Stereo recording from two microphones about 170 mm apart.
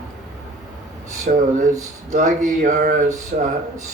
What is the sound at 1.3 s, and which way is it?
A man's voice, 50° right (ahead or behind).